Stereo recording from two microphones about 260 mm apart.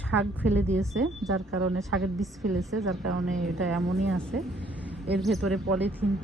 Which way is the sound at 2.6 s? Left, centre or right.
Centre.